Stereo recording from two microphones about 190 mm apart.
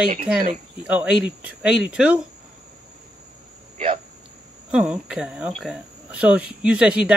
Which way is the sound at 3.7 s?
35° right (ahead or behind).